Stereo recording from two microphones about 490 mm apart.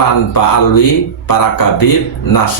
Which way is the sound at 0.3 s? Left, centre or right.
Left.